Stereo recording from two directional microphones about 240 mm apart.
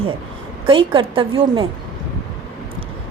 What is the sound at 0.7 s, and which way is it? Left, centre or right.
Speech, right.